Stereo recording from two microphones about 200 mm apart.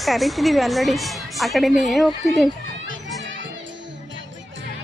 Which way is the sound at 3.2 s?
65° right (ahead or behind).